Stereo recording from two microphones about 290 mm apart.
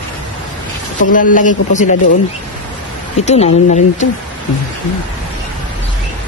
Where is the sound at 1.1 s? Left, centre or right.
Left.